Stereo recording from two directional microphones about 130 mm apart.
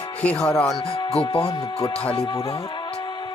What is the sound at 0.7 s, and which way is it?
Speech, 30° left (ahead or behind).